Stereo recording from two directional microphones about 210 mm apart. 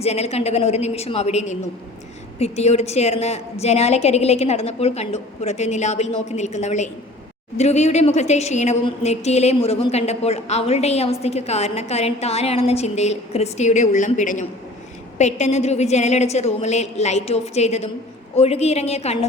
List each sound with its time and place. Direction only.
0.0 s a woman's voice: 30° left (ahead or behind)